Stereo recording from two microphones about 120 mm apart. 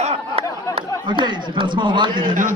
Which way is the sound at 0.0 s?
55° right (ahead or behind).